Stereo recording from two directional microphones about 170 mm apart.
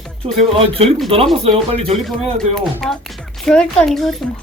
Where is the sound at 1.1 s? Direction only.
35° right (ahead or behind).